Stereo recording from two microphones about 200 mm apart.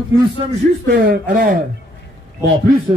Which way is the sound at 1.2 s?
40° right (ahead or behind).